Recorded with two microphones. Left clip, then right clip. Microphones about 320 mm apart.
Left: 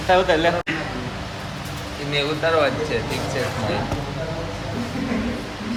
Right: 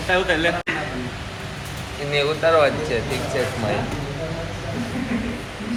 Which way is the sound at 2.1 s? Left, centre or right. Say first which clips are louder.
Right 2 dB; centre.